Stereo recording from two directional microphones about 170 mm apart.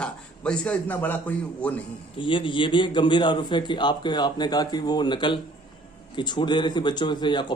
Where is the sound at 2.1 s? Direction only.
30° left (ahead or behind).